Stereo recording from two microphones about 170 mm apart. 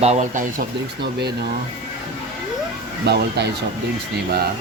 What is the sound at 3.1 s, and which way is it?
Speech, 75° right (ahead or behind).